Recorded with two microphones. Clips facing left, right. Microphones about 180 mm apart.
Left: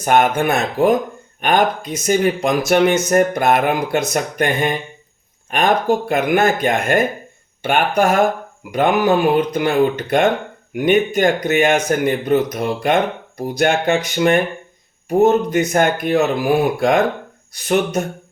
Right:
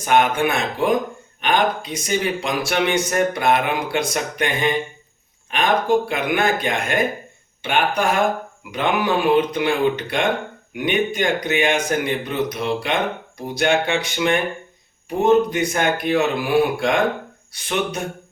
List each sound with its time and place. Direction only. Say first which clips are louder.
0.0 s speech: left 2 dB; 45° left (ahead or behind)